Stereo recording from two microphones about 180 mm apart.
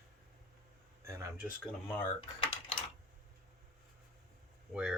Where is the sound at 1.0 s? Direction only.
15° right (ahead or behind).